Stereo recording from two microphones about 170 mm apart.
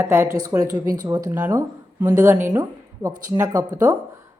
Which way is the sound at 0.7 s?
50° right (ahead or behind).